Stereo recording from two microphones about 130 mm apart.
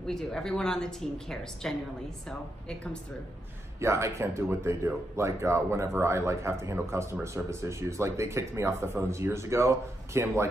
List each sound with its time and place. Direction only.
0.0 s a woman's voice: 5° left (ahead or behind)
3.8 s speech: 20° right (ahead or behind)